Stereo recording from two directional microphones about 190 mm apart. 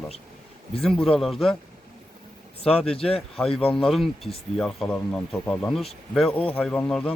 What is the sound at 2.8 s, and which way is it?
Speech, 5° left (ahead or behind).